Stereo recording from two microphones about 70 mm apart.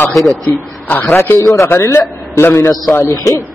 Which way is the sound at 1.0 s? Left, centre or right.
Left.